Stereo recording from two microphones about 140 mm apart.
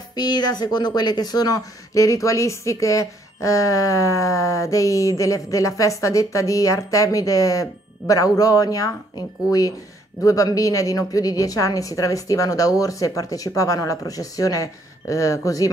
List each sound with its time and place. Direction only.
0.1 s a woman's voice: 30° left (ahead or behind)